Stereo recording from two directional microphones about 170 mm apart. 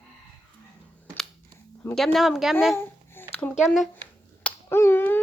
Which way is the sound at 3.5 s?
Centre (ahead or behind).